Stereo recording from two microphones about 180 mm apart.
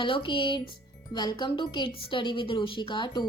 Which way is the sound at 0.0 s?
25° left (ahead or behind).